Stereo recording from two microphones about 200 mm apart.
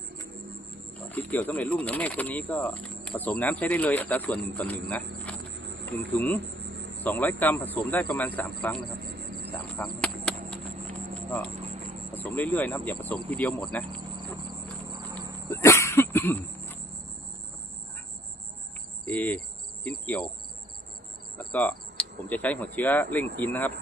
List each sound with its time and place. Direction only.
1.1 s speech: 10° left (ahead or behind)
5.5 s insect: 65° right (ahead or behind)
6.1 s speech: 10° left (ahead or behind)
9.4 s a sound: 10° left (ahead or behind)
12.4 s speech: 10° left (ahead or behind)
14.8 s horse: 20° right (ahead or behind)
15.4 s a sound: 15° left (ahead or behind)
19.0 s cricket: 5° left (ahead or behind)
21.3 s speech: 10° left (ahead or behind)